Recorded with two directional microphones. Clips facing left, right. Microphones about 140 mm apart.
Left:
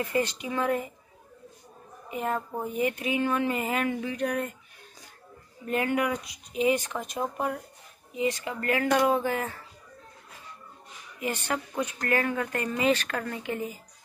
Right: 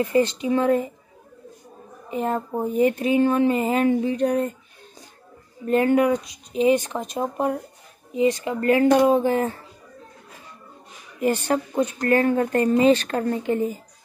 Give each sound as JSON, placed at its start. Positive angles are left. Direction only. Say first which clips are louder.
{"t": 0.0, "sound": "speech", "louder": "right 8 dB", "side_deg": -25}
{"t": 2.0, "sound": "speech", "louder": "right 5 dB", "side_deg": -30}
{"t": 5.7, "sound": "speech", "louder": "right 9 dB", "side_deg": -35}
{"t": 11.1, "sound": "speech", "louder": "right 9 dB", "side_deg": -40}